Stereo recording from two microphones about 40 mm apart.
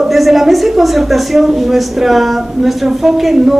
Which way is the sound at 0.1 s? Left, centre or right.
Centre.